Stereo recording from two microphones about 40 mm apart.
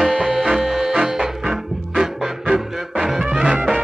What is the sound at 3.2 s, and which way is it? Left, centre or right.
Music, right.